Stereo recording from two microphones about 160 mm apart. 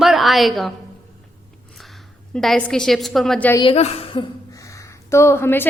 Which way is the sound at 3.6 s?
40° left (ahead or behind).